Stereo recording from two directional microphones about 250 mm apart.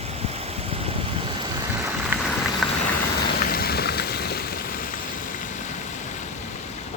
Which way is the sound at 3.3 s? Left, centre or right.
Left.